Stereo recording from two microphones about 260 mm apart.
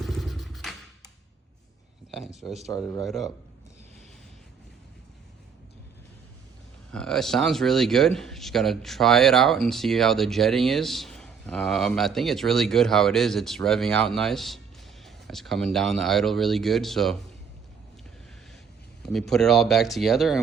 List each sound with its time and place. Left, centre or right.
0.0 s a sound: centre
2.0 s a man's voice: centre
6.9 s a man's voice: centre
19.0 s a man's voice: centre